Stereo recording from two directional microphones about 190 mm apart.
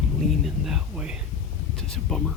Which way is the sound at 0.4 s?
Centre (ahead or behind).